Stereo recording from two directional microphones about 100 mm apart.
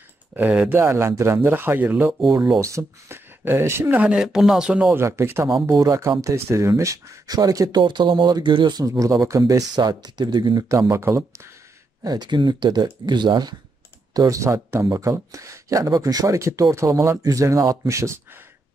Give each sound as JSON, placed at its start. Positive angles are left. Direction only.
{"t": 0.3, "sound": "speech", "side_deg": -15}
{"t": 4.0, "sound": "speech", "side_deg": -10}
{"t": 4.9, "sound": "speech", "side_deg": -25}
{"t": 7.8, "sound": "speech", "side_deg": -50}
{"t": 8.8, "sound": "speech", "side_deg": -35}
{"t": 10.7, "sound": "speech", "side_deg": -30}
{"t": 12.0, "sound": "speech", "side_deg": -45}
{"t": 14.1, "sound": "speech", "side_deg": -35}